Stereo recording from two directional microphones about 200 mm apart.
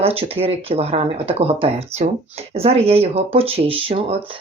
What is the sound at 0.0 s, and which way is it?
Speech, 30° right (ahead or behind).